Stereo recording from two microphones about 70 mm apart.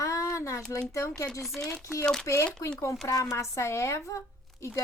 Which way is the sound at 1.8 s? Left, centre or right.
Left.